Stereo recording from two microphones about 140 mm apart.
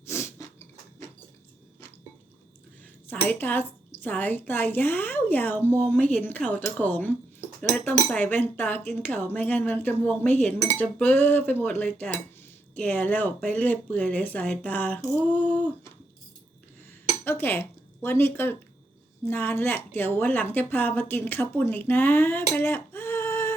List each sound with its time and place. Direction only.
0.1 s a sound: 20° left (ahead or behind)
3.1 s a woman's voice: 10° left (ahead or behind)
17.2 s a woman's voice: 15° left (ahead or behind)